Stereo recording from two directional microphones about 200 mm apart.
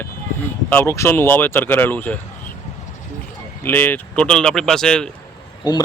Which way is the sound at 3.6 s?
10° left (ahead or behind).